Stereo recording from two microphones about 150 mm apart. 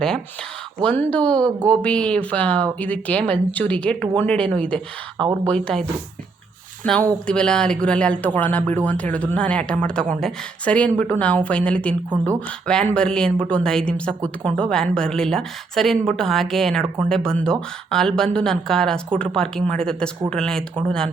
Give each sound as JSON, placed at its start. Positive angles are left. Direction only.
{"t": 0.8, "sound": "speech", "side_deg": 10}
{"t": 5.1, "sound": "speech", "side_deg": -30}
{"t": 5.5, "sound": "speech", "side_deg": 5}
{"t": 6.8, "sound": "speech", "side_deg": 5}